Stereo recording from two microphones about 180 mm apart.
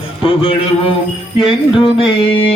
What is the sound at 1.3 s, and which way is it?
Music, 30° left (ahead or behind).